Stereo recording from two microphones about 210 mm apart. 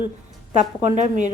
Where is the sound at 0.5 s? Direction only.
35° right (ahead or behind).